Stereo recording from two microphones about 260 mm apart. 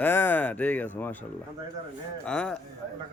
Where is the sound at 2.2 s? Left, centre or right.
Centre.